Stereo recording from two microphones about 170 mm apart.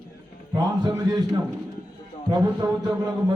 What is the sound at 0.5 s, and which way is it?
Speech, 20° right (ahead or behind).